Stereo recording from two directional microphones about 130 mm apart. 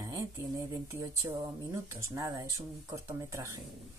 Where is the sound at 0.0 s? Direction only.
25° right (ahead or behind).